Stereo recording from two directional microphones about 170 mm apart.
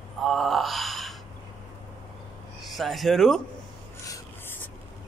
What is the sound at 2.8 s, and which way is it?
Speech, centre (ahead or behind).